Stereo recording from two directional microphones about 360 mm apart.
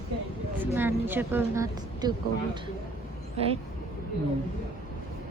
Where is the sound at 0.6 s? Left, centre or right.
Centre.